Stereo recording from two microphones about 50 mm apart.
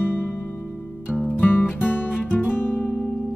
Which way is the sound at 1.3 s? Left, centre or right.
Left.